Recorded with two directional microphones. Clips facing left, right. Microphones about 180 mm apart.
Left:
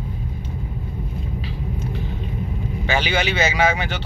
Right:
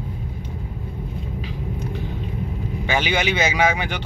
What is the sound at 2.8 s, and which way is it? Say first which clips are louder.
Speech: even; 15° right (ahead or behind).